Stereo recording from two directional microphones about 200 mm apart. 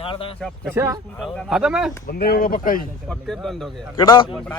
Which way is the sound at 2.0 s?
50° left (ahead or behind).